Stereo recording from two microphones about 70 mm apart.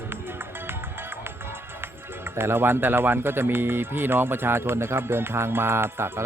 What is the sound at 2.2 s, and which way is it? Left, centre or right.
Speech, right.